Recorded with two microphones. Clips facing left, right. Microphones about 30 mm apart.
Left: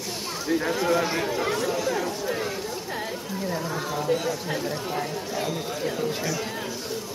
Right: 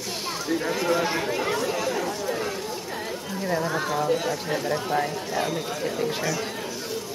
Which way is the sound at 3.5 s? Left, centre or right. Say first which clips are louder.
Right 5 dB; right.